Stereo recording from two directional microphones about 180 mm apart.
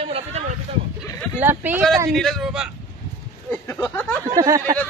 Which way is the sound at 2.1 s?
Centre (ahead or behind).